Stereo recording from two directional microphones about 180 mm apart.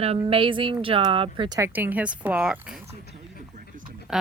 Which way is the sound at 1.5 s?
15° right (ahead or behind).